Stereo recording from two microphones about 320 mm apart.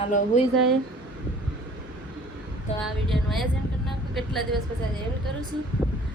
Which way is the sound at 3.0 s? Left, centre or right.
Centre.